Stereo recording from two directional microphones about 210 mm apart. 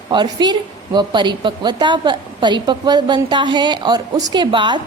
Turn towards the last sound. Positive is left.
turn(degrees=-20)  # may be behind; listen again after turning